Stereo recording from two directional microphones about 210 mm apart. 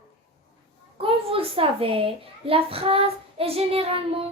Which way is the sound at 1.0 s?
25° right (ahead or behind).